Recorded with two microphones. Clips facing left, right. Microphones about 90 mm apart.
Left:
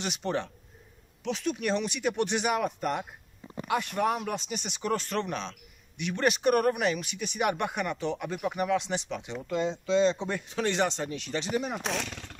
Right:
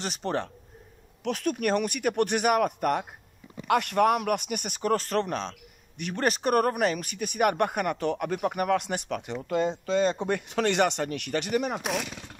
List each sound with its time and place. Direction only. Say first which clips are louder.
0.0 s speech: right 1 dB; 40° right (ahead or behind)
1.2 s speech: right 3 dB; 50° right (ahead or behind)
11.8 s speech: right 2 dB; 10° right (ahead or behind)